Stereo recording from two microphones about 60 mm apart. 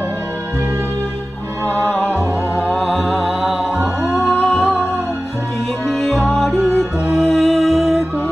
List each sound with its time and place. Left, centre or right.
1.7 s music: left
2.7 s music: centre
5.9 s music: centre